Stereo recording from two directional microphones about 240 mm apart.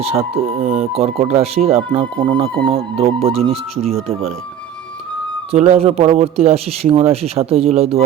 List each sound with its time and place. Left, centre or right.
0.0 s speech: right
5.5 s speech: right